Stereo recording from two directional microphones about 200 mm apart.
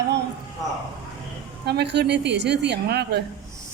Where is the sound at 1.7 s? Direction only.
55° right (ahead or behind).